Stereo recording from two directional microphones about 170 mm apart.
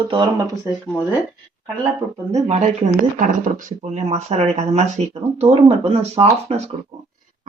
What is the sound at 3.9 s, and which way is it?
Speech, 40° right (ahead or behind).